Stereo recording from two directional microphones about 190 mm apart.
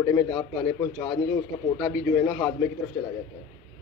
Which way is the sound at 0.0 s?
15° left (ahead or behind).